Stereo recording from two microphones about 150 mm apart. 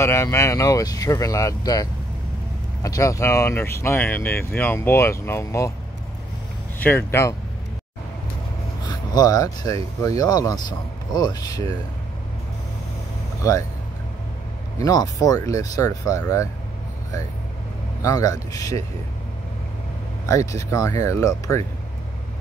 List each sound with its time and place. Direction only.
0.0 s speech: 20° left (ahead or behind)
7.1 s speech: 20° left (ahead or behind)
8.8 s speech: 25° left (ahead or behind)
13.4 s speech: 20° left (ahead or behind)
14.8 s speech: 25° left (ahead or behind)
18.0 s speech: 25° left (ahead or behind)
20.2 s speech: 20° left (ahead or behind)